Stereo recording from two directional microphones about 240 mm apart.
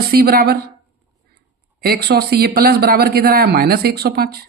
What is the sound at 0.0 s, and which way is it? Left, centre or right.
Speech, right.